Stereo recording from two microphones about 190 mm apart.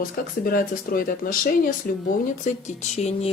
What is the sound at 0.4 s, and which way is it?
Speech, 50° left (ahead or behind).